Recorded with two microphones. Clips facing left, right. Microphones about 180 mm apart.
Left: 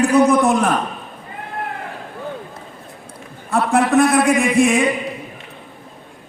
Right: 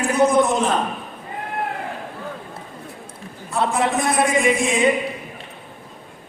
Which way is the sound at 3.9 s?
60° left (ahead or behind).